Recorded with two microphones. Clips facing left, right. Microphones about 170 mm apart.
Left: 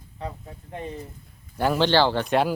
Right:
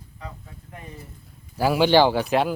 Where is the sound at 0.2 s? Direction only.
30° left (ahead or behind).